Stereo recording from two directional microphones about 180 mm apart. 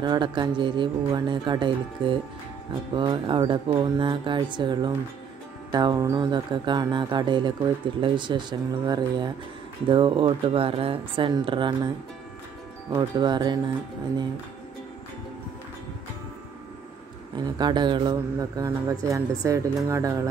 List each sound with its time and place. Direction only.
0.0 s speech: 25° right (ahead or behind)
12.9 s speech: 25° right (ahead or behind)
17.4 s speech: 25° right (ahead or behind)